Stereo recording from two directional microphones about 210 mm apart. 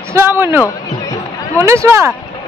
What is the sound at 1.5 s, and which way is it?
Speech, 15° right (ahead or behind).